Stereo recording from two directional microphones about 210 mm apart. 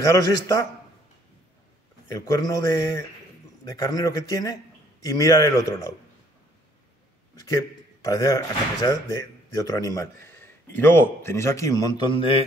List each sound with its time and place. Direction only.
0.1 s a man's voice: 15° left (ahead or behind)
2.0 s a man's voice: 15° left (ahead or behind)
7.4 s a man's voice: 15° left (ahead or behind)